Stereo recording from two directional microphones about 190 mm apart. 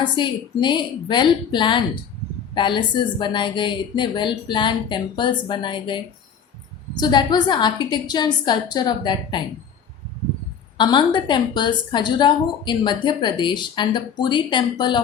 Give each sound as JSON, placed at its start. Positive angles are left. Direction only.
{"t": 0.0, "sound": "a woman's voice", "side_deg": 25}
{"t": 7.0, "sound": "a woman's voice", "side_deg": 25}
{"t": 10.8, "sound": "a woman's voice", "side_deg": 25}